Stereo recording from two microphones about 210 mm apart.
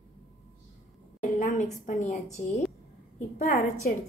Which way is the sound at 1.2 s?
35° left (ahead or behind).